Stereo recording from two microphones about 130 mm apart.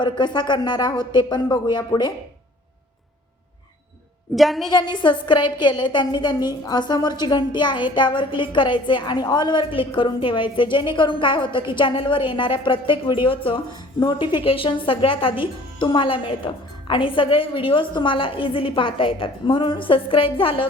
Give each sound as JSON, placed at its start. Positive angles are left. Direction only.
{"t": 0.0, "sound": "a woman's voice", "side_deg": 35}
{"t": 4.4, "sound": "a woman's voice", "side_deg": 0}
{"t": 4.7, "sound": "a woman's voice", "side_deg": 35}